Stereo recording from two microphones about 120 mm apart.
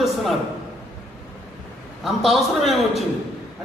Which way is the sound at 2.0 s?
Centre (ahead or behind).